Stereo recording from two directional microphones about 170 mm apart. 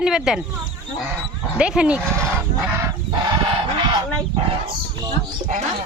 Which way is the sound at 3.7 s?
25° right (ahead or behind).